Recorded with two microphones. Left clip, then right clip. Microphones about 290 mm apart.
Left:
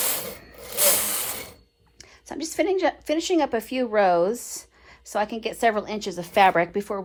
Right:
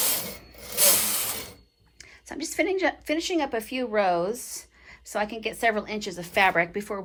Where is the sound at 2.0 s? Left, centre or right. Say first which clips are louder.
Left 2 dB; centre.